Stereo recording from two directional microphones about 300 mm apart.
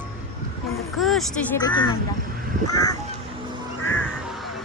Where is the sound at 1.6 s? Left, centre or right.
Centre.